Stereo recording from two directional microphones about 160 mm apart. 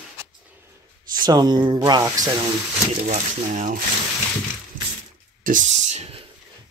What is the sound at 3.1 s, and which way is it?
Speech, 50° right (ahead or behind).